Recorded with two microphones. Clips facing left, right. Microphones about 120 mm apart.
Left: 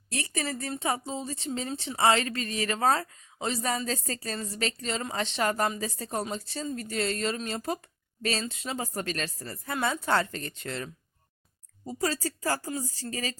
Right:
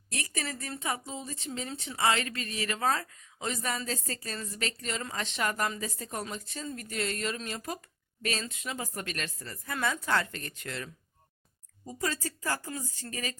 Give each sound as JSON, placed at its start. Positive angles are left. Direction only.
{"t": 0.1, "sound": "speech", "side_deg": 30}